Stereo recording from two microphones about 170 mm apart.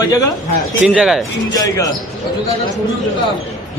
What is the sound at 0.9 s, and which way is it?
Speech, 5° right (ahead or behind).